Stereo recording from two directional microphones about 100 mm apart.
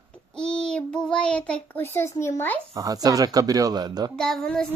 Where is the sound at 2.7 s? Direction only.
35° right (ahead or behind).